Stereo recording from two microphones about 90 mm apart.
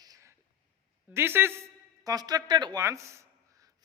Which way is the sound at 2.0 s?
45° right (ahead or behind).